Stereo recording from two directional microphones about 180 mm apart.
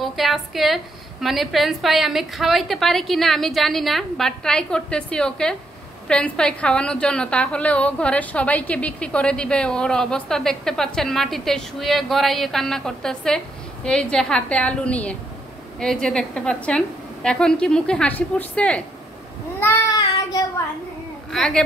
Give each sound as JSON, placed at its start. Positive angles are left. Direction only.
{"t": 0.0, "sound": "a sound", "side_deg": 0}
{"t": 1.2, "sound": "a woman's voice", "side_deg": 0}
{"t": 19.6, "sound": "child singing", "side_deg": 20}
{"t": 21.3, "sound": "a woman's voice", "side_deg": 5}